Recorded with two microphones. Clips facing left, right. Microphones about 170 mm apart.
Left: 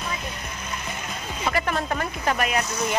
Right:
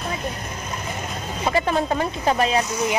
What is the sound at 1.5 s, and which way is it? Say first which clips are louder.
Speech: right 4 dB; 25° right (ahead or behind).